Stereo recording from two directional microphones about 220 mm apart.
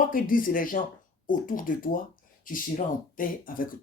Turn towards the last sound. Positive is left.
turn(degrees=40)  # may be behind; listen again after turning